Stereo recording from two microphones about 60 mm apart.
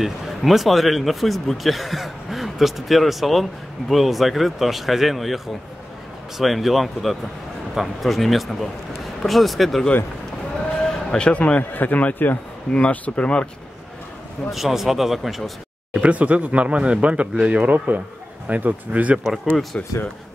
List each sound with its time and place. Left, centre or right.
0.0 s speech: centre
14.5 s speech: centre
16.0 s speech: right
19.2 s speech: centre